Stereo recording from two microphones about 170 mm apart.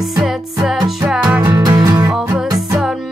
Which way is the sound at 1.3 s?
15° right (ahead or behind).